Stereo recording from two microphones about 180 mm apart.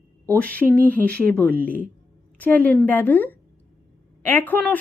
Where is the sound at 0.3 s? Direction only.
10° left (ahead or behind).